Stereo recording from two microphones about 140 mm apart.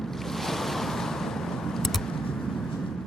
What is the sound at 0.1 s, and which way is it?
Waves, centre (ahead or behind).